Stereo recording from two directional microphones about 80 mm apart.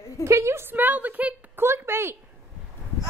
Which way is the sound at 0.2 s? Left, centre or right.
Right.